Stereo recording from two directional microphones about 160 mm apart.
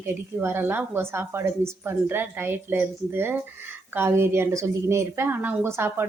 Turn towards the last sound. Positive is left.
turn(degrees=-15)  # may be behind; listen again after turning